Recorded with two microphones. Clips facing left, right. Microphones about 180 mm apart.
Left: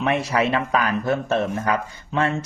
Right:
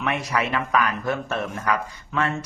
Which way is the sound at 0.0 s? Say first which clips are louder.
Left 4 dB; 30° left (ahead or behind).